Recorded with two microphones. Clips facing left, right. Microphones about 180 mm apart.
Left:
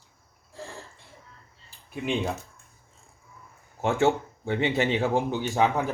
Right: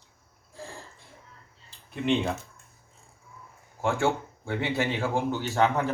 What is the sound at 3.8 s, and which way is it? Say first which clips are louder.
Speech: left 3 dB; 20° left (ahead or behind).